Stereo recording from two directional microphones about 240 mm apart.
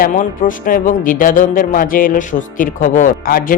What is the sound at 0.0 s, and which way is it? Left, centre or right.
Speech, left.